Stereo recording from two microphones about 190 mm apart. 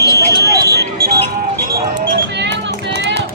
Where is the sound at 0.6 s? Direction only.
55° right (ahead or behind).